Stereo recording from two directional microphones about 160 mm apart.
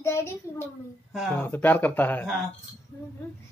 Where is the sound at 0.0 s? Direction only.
15° left (ahead or behind).